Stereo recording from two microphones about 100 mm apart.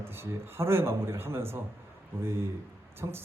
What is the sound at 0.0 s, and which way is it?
A man's voice, 25° right (ahead or behind).